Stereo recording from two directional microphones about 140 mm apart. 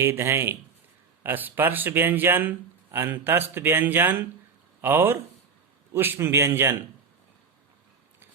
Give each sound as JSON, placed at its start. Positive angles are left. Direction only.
{"t": 0.0, "sound": "speech", "side_deg": -15}